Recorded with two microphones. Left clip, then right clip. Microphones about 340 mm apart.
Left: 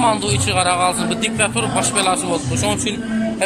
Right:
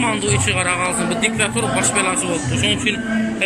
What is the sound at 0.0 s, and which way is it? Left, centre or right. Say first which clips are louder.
Speech: left 2 dB; centre.